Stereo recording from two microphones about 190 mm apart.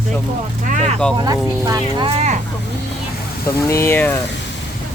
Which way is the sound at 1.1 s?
20° right (ahead or behind).